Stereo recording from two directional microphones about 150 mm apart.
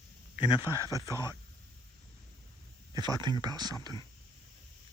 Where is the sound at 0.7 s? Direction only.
25° left (ahead or behind).